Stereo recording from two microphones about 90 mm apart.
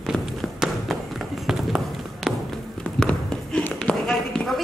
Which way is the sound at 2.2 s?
Centre (ahead or behind).